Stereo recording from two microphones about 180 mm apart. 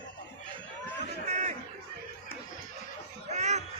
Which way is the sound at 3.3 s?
40° right (ahead or behind).